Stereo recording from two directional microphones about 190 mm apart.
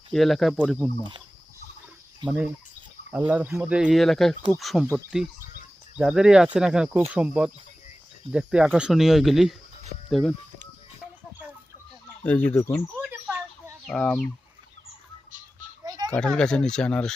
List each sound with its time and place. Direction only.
0.1 s speech: centre (ahead or behind)
2.2 s speech: 5° right (ahead or behind)
12.2 s speech: 10° left (ahead or behind)
13.0 s bird: 5° right (ahead or behind)
13.8 s speech: centre (ahead or behind)
15.8 s children playing: 20° right (ahead or behind)
16.1 s speech: 5° left (ahead or behind)